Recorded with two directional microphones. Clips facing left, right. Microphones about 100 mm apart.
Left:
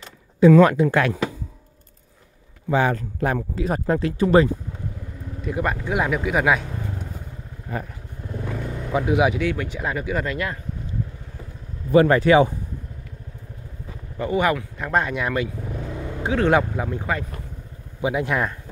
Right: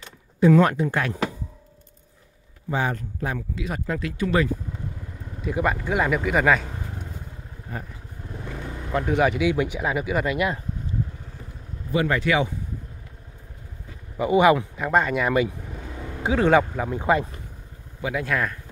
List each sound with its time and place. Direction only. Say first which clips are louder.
0.7 s speech: left 6 dB; 90° left
2.7 s a man's voice: left 5 dB; 75° left (ahead or behind)
3.3 s speech: left 6 dB; 40° left (ahead or behind)
5.4 s speech: right 1 dB; centre (ahead or behind)
7.7 s speech: left 5 dB; 90° left
8.9 s speech: left 2 dB; 5° left (ahead or behind)
9.4 s speech: right 2 dB; 15° right (ahead or behind)
11.9 s speech: left 7 dB; 40° left (ahead or behind)
14.1 s speech: right 4 dB; 10° right (ahead or behind)
14.8 s speech: right 1 dB; centre (ahead or behind)
17.0 s speech: right 5 dB; 20° right (ahead or behind)
18.0 s speech: left 3 dB; 20° left (ahead or behind)